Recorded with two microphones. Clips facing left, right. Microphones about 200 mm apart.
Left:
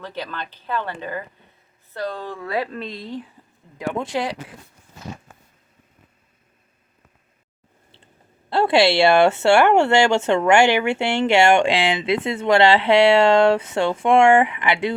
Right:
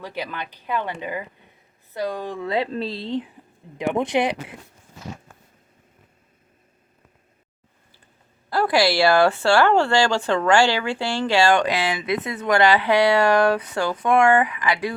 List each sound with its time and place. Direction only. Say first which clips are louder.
0.0 s a woman's voice: even; 10° right (ahead or behind)
8.4 s speech: left 3 dB; 25° left (ahead or behind)